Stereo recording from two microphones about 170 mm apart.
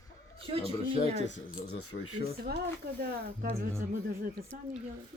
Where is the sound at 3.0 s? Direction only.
65° right (ahead or behind).